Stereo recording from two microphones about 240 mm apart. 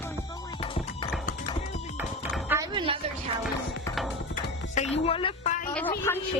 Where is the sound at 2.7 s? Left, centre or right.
Right.